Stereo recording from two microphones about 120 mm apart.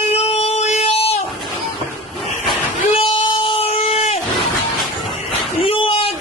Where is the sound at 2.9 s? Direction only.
50° left (ahead or behind).